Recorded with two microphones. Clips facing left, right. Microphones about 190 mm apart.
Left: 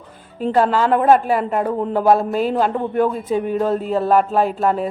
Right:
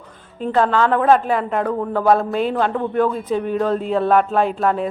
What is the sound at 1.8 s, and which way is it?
Speech, 20° left (ahead or behind).